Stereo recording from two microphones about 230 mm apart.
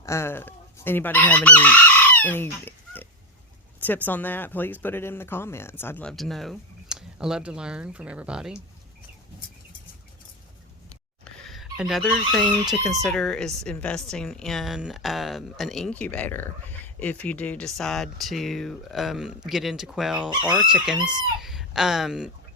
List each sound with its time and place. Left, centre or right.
0.0 s chicken: centre
3.8 s speech: centre
11.4 s a woman's voice: centre
20.9 s speech: centre
21.4 s speech: centre